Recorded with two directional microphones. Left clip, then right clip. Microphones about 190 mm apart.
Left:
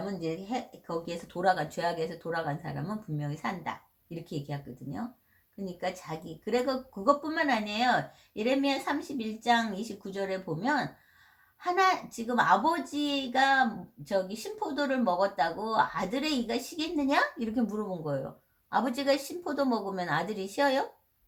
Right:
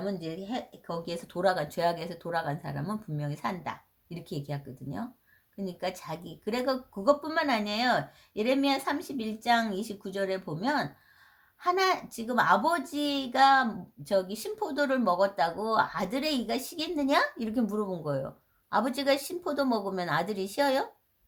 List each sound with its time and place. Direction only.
1.0 s speech: 40° right (ahead or behind)